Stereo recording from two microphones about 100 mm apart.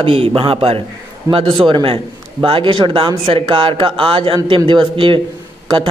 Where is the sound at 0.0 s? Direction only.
70° right (ahead or behind).